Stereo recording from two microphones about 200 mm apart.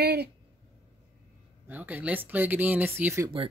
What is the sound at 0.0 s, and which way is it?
Speech, 55° right (ahead or behind).